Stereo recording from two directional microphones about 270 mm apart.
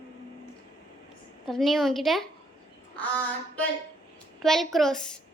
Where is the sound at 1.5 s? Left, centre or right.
Centre.